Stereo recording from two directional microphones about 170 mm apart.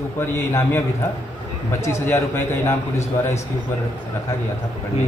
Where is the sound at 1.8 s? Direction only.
15° left (ahead or behind).